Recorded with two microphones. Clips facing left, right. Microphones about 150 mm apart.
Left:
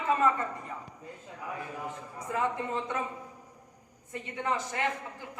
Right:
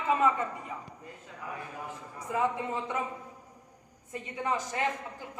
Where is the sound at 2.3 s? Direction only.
15° right (ahead or behind).